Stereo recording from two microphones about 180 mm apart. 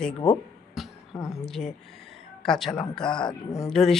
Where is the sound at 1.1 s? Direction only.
Centre (ahead or behind).